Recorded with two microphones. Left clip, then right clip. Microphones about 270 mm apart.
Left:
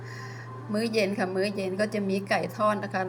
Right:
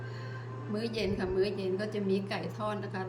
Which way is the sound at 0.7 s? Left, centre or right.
Centre.